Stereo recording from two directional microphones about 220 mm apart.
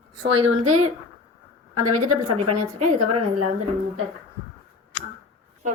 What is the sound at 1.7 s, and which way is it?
A woman's voice, 90° right.